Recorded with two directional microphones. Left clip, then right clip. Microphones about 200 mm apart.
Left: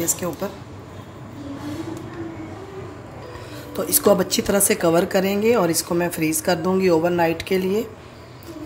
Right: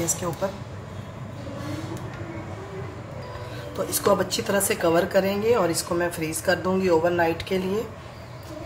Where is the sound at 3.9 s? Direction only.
35° left (ahead or behind).